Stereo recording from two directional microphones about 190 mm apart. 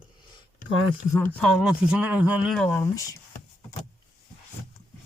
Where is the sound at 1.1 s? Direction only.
10° left (ahead or behind).